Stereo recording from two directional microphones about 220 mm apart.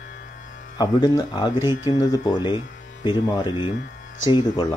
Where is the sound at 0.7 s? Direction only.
20° left (ahead or behind).